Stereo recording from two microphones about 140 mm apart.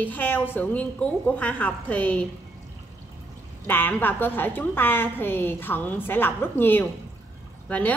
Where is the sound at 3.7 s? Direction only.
15° left (ahead or behind).